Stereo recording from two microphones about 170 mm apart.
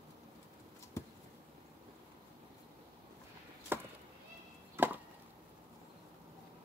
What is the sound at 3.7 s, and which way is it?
Chop, 15° right (ahead or behind).